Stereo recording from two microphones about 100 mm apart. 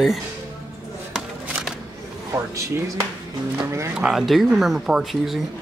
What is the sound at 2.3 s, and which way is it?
Speech, 30° right (ahead or behind).